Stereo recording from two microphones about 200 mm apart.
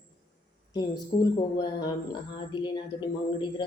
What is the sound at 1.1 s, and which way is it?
Speech, 45° left (ahead or behind).